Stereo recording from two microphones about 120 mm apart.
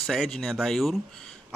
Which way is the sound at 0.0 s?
Centre (ahead or behind).